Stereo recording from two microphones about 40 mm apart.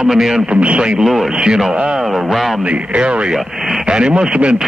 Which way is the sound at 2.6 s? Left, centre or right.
Right.